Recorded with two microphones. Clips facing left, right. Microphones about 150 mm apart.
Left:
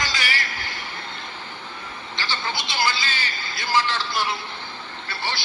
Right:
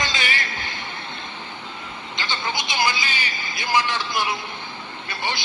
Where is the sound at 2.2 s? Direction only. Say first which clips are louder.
Right 1 dB; 20° right (ahead or behind).